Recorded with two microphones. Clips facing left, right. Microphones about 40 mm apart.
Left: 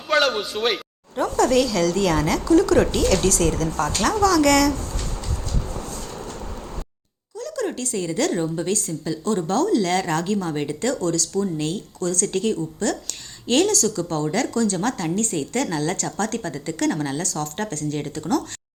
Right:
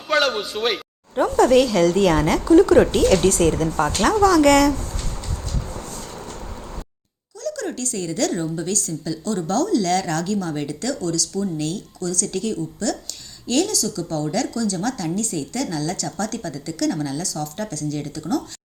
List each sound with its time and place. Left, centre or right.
0.1 s speech: centre
1.1 s speech: right
7.3 s a woman's voice: left
11.5 s a woman's voice: left
11.9 s a woman's voice: left
14.0 s a woman's voice: left